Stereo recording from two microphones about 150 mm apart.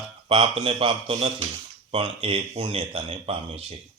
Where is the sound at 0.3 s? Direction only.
40° right (ahead or behind).